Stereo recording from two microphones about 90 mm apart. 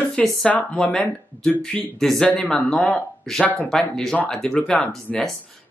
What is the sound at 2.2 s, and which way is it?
Speech, 15° left (ahead or behind).